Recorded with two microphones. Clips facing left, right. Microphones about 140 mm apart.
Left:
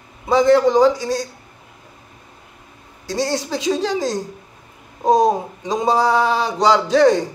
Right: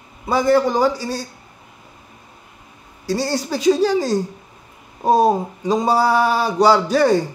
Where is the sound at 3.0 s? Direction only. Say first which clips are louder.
Even; 5° right (ahead or behind).